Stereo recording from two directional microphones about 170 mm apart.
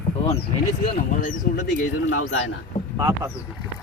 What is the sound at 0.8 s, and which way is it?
Speech, 50° left (ahead or behind).